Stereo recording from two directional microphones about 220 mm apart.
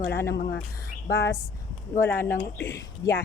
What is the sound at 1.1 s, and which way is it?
Speech, 50° left (ahead or behind).